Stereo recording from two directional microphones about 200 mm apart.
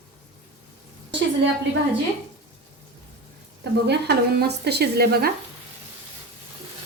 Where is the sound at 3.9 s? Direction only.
55° right (ahead or behind).